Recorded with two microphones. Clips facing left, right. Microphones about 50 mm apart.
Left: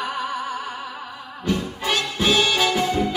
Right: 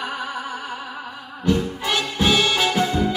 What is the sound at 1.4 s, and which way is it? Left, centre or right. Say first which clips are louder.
Music: right 3 dB; left.